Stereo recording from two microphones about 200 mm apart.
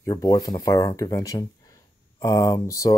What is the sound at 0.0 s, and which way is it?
Speech, 20° left (ahead or behind).